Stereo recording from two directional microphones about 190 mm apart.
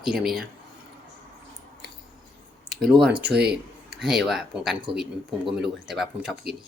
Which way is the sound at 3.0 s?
5° right (ahead or behind).